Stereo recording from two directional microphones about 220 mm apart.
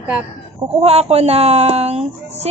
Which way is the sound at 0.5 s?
25° right (ahead or behind).